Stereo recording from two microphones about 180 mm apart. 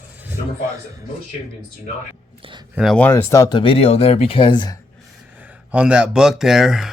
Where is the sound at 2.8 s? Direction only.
5° left (ahead or behind); by 4.7 s 25° left (ahead or behind).